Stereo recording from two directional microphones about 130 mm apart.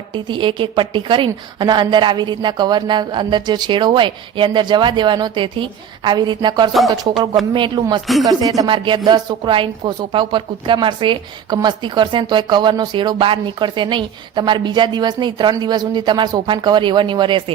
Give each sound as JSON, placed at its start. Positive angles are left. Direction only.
{"t": 0.1, "sound": "speech", "side_deg": -40}
{"t": 8.0, "sound": "speech", "side_deg": 0}
{"t": 8.3, "sound": "speech", "side_deg": -30}